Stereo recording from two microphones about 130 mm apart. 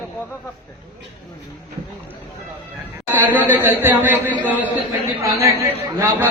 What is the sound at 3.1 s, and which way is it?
A man's voice, 15° right (ahead or behind).